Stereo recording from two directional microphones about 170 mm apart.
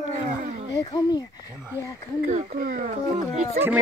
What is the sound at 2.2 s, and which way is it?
Speech, 60° right (ahead or behind).